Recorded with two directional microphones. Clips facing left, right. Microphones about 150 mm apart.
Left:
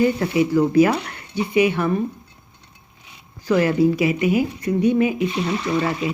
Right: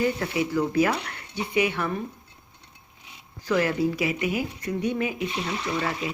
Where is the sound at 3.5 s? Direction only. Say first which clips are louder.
Left 6 dB; 25° left (ahead or behind).